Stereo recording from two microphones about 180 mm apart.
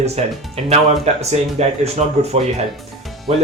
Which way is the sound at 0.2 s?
35° right (ahead or behind).